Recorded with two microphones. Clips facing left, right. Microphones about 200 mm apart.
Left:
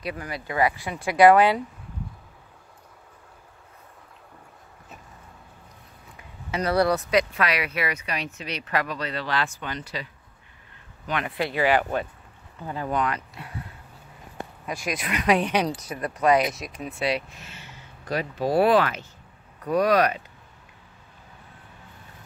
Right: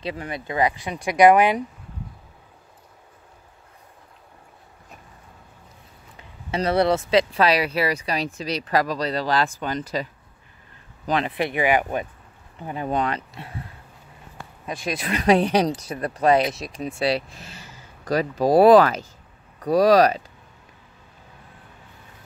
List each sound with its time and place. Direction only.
0.0 s speech: 25° right (ahead or behind)
6.1 s speech: 25° right (ahead or behind); by 10.0 s 40° right (ahead or behind)
11.2 s speech: 20° right (ahead or behind)
14.7 s speech: 30° right (ahead or behind)